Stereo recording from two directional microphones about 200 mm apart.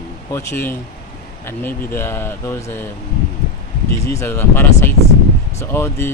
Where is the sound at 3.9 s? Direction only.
15° left (ahead or behind).